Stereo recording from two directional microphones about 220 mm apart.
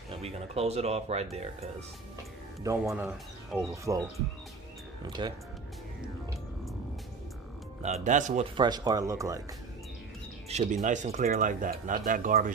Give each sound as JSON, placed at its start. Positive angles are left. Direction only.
{"t": 0.1, "sound": "speech", "side_deg": -30}
{"t": 2.6, "sound": "speech", "side_deg": -10}
{"t": 5.2, "sound": "speech", "side_deg": -20}
{"t": 7.8, "sound": "speech", "side_deg": -30}
{"t": 8.5, "sound": "speech", "side_deg": -20}
{"t": 10.5, "sound": "speech", "side_deg": -30}